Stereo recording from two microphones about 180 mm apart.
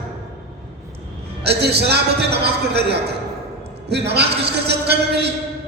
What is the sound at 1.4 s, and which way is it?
A man's voice, 65° right (ahead or behind).